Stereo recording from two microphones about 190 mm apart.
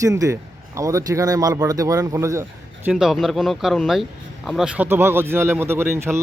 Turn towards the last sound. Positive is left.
turn(degrees=-15)  # may be behind; listen again after turning